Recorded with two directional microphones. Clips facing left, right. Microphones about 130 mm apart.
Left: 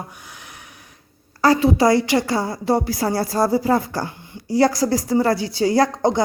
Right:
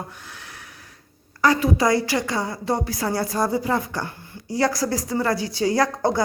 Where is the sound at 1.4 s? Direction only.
30° left (ahead or behind).